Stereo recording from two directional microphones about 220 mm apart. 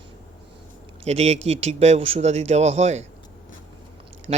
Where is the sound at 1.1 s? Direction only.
30° right (ahead or behind).